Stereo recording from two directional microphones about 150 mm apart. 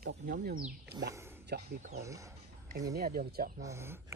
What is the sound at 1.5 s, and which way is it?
Speech, 90° right.